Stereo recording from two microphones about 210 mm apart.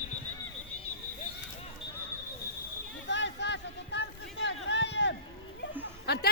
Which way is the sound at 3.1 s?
55° left (ahead or behind).